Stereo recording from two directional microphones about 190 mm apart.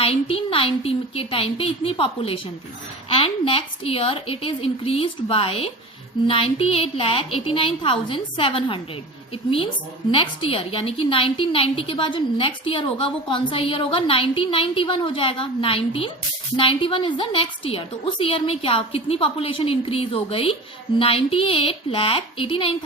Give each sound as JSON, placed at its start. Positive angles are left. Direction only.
{"t": 0.0, "sound": "a woman's voice", "side_deg": 30}
{"t": 10.1, "sound": "a woman's voice", "side_deg": 30}